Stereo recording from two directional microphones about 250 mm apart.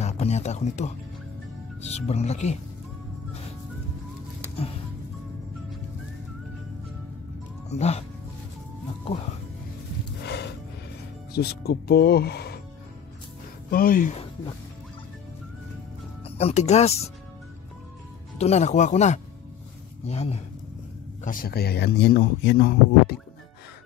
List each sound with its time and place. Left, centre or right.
0.0 s speech: left
7.7 s speech: left
10.2 s music: left
11.3 s speech: left
13.7 s speech: left
16.3 s speech: left
18.4 s speech: left